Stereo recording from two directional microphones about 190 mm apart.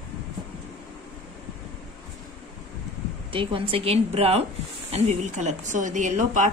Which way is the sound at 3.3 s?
30° right (ahead or behind).